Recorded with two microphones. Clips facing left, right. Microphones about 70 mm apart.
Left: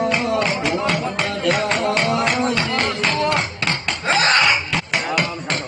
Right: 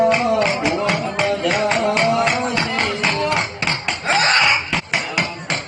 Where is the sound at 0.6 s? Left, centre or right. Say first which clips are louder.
Right 1 dB; centre.